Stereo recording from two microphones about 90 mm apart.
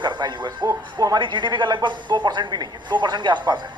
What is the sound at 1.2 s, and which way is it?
Speech, 60° right (ahead or behind).